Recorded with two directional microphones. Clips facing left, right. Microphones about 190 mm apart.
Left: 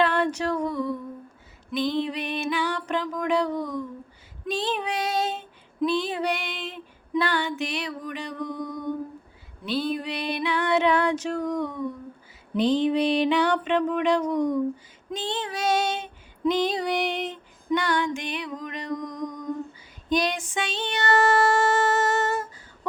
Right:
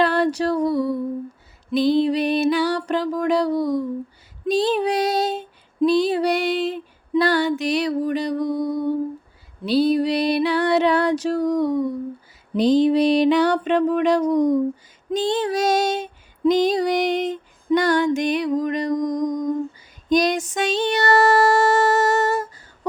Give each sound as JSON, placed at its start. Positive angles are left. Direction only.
{"t": 0.0, "sound": "a sound", "side_deg": -35}
{"t": 1.7, "sound": "music", "side_deg": -35}
{"t": 4.4, "sound": "female singing", "side_deg": -40}
{"t": 9.6, "sound": "music", "side_deg": -35}
{"t": 15.1, "sound": "female singing", "side_deg": -40}
{"t": 20.1, "sound": "a sound", "side_deg": -40}